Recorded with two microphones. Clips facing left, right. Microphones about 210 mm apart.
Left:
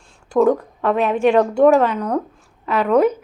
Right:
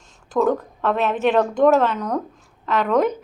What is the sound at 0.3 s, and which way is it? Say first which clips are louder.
A woman's voice: left 4 dB; 10° left (ahead or behind).